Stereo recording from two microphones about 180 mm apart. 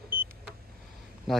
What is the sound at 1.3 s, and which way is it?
Speech, centre (ahead or behind).